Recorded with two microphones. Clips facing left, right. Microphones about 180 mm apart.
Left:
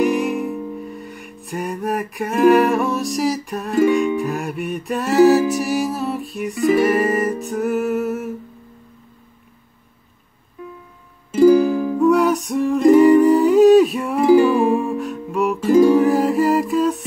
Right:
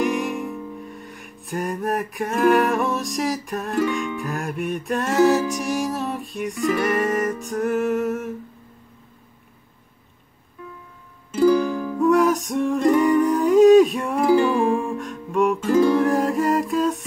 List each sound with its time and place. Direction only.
0.0 s music: centre (ahead or behind)
11.3 s music: 10° left (ahead or behind)
15.7 s music: 15° left (ahead or behind)
16.0 s humming: centre (ahead or behind)